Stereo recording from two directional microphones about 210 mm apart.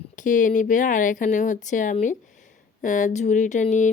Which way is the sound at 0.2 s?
40° left (ahead or behind).